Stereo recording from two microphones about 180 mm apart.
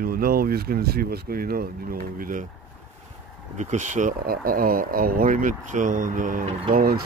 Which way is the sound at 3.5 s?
40° right (ahead or behind).